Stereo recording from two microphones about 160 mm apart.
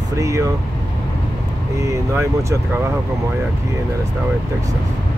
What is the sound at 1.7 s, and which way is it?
Speech, 20° right (ahead or behind).